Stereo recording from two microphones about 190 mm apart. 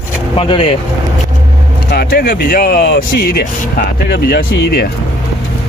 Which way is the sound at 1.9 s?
55° left (ahead or behind).